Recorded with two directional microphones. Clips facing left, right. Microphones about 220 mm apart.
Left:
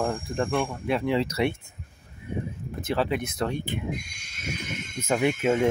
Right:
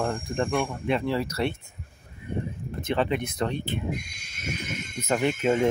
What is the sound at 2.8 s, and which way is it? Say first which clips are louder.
Speech: even; 5° left (ahead or behind).